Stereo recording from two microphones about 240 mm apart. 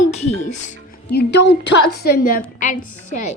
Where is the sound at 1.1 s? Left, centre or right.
Left.